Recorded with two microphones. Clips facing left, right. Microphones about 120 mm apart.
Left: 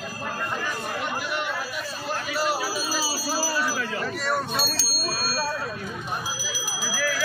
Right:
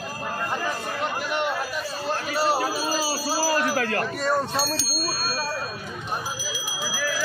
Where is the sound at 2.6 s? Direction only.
50° right (ahead or behind).